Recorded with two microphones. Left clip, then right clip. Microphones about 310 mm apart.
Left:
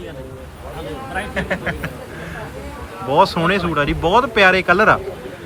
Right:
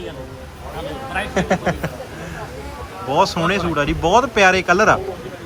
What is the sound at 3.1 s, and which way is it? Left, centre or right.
Speech, centre.